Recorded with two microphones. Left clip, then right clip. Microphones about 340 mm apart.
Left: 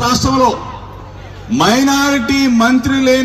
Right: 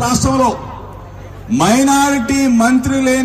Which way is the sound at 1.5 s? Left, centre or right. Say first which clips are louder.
Even; right.